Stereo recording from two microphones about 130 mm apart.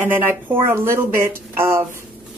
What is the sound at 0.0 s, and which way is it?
A woman's voice, 15° right (ahead or behind).